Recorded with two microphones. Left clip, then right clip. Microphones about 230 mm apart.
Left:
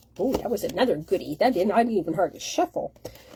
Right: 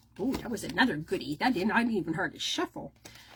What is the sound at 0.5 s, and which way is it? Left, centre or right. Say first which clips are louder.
Speech: left 1 dB; centre.